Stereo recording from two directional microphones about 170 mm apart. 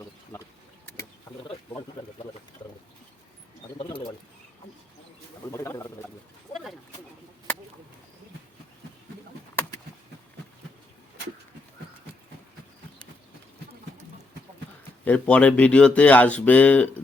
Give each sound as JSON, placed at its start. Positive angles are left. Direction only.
{"t": 3.8, "sound": "bird", "side_deg": 30}
{"t": 5.5, "sound": "a sound", "side_deg": 15}
{"t": 15.0, "sound": "speech", "side_deg": 10}